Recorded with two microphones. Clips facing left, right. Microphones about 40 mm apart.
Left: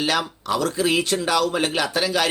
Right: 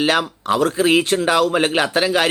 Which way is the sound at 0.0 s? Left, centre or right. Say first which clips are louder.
Right 5 dB; right.